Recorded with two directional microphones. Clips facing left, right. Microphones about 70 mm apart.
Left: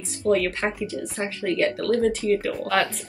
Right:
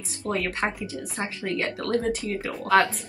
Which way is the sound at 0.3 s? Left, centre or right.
Centre.